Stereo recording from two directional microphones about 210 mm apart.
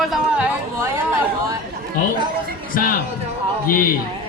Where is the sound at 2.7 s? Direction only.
40° left (ahead or behind).